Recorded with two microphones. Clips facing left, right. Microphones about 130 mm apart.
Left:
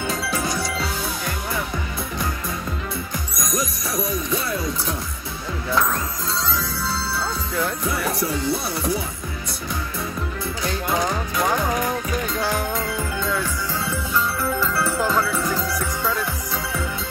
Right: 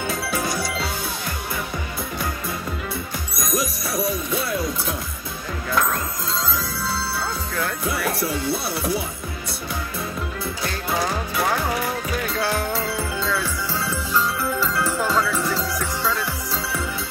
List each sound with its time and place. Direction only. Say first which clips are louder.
0.4 s music: even; centre (ahead or behind)
4.3 s music: even; centre (ahead or behind)
7.8 s music: even; centre (ahead or behind)
12.4 s music: right 2 dB; 15° left (ahead or behind)
14.1 s music: even; 10° right (ahead or behind)
15.4 s music: left 1 dB; 15° left (ahead or behind)